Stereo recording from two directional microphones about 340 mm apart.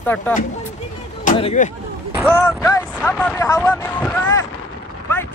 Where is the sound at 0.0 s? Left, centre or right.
Centre.